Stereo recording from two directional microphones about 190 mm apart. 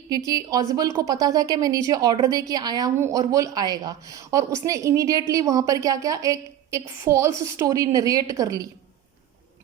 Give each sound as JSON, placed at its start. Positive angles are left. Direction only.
{"t": 0.3, "sound": "a woman's voice", "side_deg": -20}